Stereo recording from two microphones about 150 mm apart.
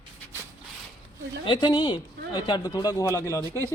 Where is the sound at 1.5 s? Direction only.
30° left (ahead or behind).